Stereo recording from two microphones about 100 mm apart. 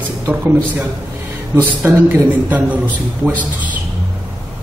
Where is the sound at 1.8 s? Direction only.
20° right (ahead or behind).